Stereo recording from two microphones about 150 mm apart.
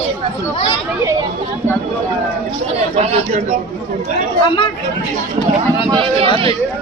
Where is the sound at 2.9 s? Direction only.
45° right (ahead or behind).